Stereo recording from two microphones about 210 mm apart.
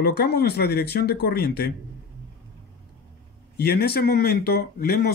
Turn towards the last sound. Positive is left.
turn(degrees=50)  # may be behind; listen again after turning